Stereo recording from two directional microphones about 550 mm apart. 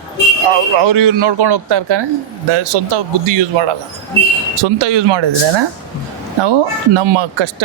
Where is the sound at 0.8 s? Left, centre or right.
Right.